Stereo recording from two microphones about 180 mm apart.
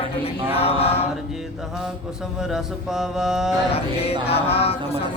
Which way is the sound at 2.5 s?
Centre (ahead or behind).